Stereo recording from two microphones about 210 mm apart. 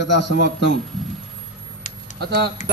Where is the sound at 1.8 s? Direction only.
40° left (ahead or behind).